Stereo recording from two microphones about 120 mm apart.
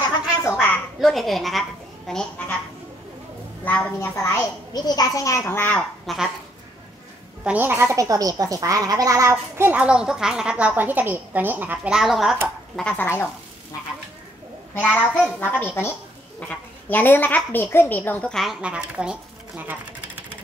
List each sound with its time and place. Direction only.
0.5 s a sound: 20° left (ahead or behind)
1.0 s a child's voice: centre (ahead or behind)
3.6 s a woman's voice: 15° left (ahead or behind)
4.7 s a child's voice: 35° left (ahead or behind); by 5.9 s 15° left (ahead or behind)
6.0 s speech: 5° right (ahead or behind)
7.4 s speech: 15° right (ahead or behind)
12.9 s a child's voice: 20° left (ahead or behind)
14.9 s speech: 5° right (ahead or behind)
15.2 s a woman's voice: 15° left (ahead or behind)
18.3 s speech: centre (ahead or behind)